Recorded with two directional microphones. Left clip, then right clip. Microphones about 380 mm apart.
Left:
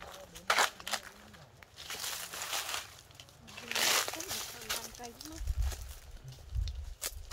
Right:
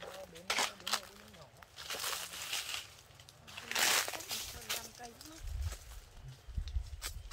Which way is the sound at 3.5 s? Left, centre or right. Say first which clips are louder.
Left 1 dB; centre.